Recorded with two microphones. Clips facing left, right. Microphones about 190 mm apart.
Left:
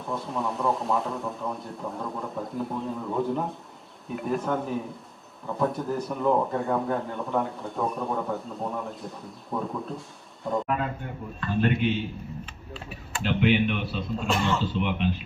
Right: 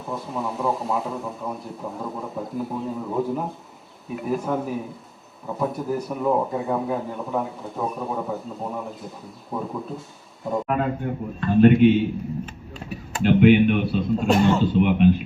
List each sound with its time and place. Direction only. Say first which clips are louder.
0.0 s speech: right 1 dB; centre (ahead or behind)
10.7 s speech: right 6 dB; 50° right (ahead or behind)